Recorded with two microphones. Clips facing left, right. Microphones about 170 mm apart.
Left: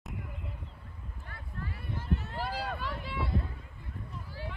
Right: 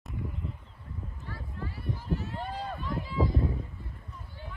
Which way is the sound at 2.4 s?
75° left (ahead or behind).